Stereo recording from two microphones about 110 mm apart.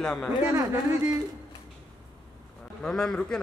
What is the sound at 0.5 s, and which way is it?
Speech, 25° right (ahead or behind).